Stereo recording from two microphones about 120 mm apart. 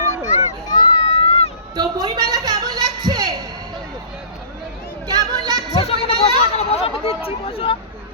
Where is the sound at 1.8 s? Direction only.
35° right (ahead or behind).